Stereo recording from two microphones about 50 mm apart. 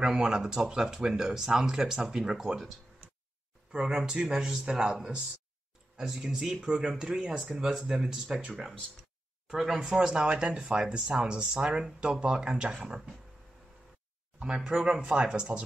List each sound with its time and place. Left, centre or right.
0.0 s speech: centre
3.8 s speech: centre
5.9 s speech: centre
14.4 s speech: centre